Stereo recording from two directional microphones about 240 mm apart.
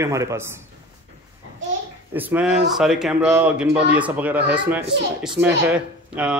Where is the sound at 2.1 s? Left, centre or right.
Centre.